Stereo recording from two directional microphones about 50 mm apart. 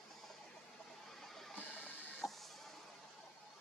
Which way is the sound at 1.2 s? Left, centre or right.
Centre.